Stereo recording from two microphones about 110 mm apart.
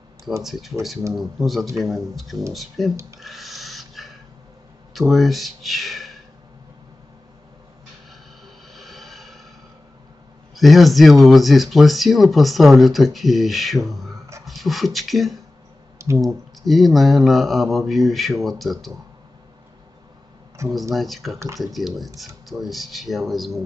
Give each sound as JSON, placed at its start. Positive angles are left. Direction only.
{"t": 0.4, "sound": "speech", "side_deg": 0}
{"t": 3.2, "sound": "dog", "side_deg": 0}
{"t": 4.9, "sound": "speech", "side_deg": 0}
{"t": 8.7, "sound": "vehicle", "side_deg": 0}
{"t": 10.5, "sound": "a man's voice", "side_deg": 0}
{"t": 20.6, "sound": "speech", "side_deg": -25}
{"t": 20.9, "sound": "speech", "side_deg": 0}